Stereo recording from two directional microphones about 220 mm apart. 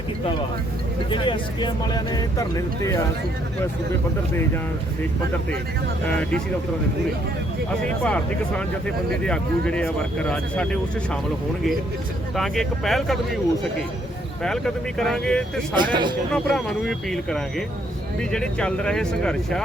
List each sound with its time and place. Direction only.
1.1 s speech: 20° left (ahead or behind)
8.0 s speech: 5° left (ahead or behind)
12.4 s speech: centre (ahead or behind)
14.4 s speech: centre (ahead or behind)
15.7 s speech: 20° right (ahead or behind)
16.3 s speech: centre (ahead or behind)